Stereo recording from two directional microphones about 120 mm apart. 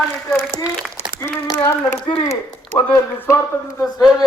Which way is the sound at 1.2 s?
20° left (ahead or behind).